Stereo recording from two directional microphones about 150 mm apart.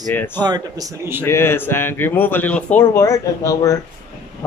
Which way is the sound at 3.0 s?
20° left (ahead or behind).